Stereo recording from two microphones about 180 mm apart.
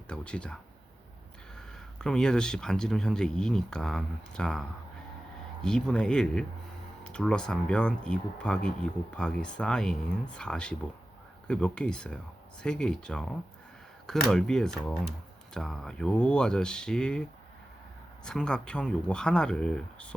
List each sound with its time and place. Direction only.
0.1 s speech: 5° left (ahead or behind)
5.6 s speech: 5° left (ahead or behind)
18.3 s speech: 5° left (ahead or behind)